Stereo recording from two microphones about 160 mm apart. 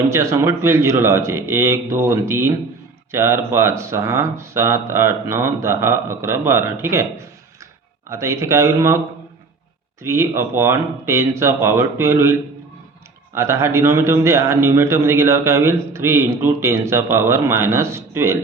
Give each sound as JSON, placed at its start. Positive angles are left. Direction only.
{"t": 0.1, "sound": "a man's voice", "side_deg": -15}
{"t": 10.0, "sound": "a man's voice", "side_deg": -15}